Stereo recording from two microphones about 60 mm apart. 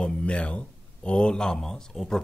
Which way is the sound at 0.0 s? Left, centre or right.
Centre.